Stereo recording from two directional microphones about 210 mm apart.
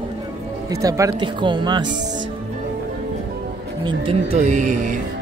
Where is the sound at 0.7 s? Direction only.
15° right (ahead or behind).